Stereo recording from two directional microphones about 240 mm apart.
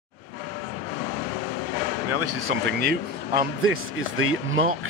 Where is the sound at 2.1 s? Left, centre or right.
Right.